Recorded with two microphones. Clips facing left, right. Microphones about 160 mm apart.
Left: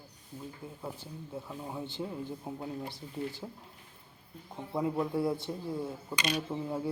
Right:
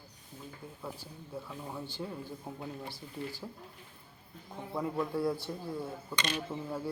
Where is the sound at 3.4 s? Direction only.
15° left (ahead or behind).